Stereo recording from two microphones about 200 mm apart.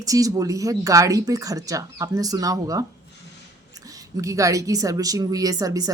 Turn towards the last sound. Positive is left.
turn(degrees=-20)  # may be behind; listen again after turning